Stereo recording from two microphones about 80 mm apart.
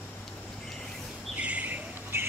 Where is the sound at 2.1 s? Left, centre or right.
Right.